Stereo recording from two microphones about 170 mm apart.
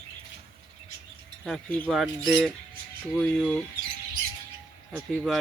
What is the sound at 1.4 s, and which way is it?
Speech, 5° left (ahead or behind).